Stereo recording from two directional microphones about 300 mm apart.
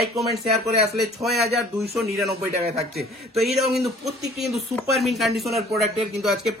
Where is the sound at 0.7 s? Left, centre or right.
Right.